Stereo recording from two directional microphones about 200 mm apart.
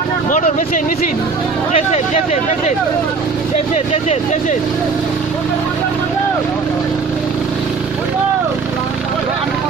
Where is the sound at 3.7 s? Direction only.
35° left (ahead or behind).